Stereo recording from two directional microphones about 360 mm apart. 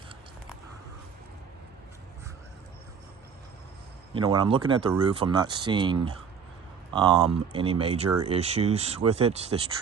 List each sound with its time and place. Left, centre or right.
4.1 s speech: centre